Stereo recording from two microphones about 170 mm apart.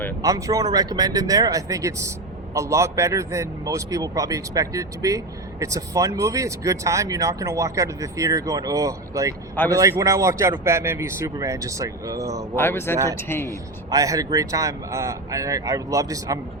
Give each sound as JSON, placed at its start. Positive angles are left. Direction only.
{"t": 0.2, "sound": "speech", "side_deg": -20}
{"t": 12.5, "sound": "speech", "side_deg": 15}
{"t": 13.5, "sound": "speech", "side_deg": -20}